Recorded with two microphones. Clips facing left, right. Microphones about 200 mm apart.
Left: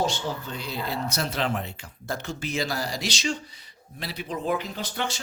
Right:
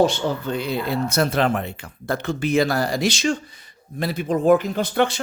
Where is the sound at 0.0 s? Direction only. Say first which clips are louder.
Right 8 dB; 60° right (ahead or behind).